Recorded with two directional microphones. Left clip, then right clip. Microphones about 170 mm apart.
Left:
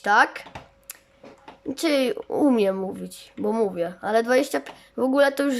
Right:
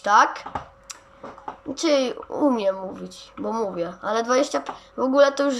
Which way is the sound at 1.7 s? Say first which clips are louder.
Right 1 dB; 50° left (ahead or behind).